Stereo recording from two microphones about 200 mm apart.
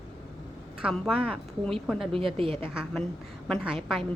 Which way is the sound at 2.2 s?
25° right (ahead or behind).